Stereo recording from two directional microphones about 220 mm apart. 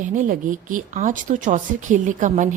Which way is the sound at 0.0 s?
35° right (ahead or behind).